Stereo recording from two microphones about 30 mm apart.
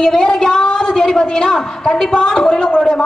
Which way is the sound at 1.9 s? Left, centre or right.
Centre.